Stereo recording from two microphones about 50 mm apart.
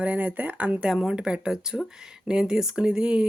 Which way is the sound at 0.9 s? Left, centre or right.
Centre.